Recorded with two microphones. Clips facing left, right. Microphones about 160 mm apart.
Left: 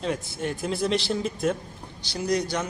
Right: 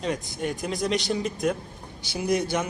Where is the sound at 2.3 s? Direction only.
20° right (ahead or behind).